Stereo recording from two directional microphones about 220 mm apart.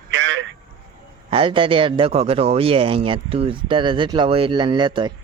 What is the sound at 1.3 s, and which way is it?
Speech, 25° right (ahead or behind).